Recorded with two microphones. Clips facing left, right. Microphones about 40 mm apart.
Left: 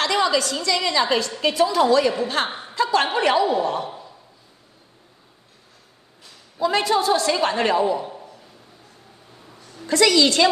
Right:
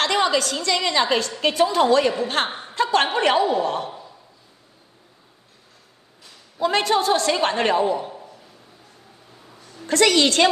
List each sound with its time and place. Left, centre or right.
0.0 s a woman's voice: right
3.4 s a woman's voice: left
6.6 s a woman's voice: right
8.1 s a sound: centre
9.8 s a woman's voice: right